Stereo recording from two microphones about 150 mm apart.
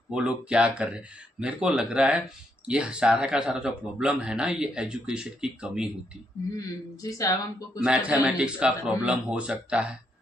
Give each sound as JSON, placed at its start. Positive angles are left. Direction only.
{"t": 0.1, "sound": "speech", "side_deg": -5}
{"t": 6.5, "sound": "speech", "side_deg": 25}
{"t": 7.8, "sound": "speech", "side_deg": -10}